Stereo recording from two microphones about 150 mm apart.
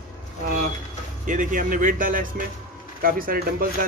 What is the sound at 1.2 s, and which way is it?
Speech, 60° right (ahead or behind).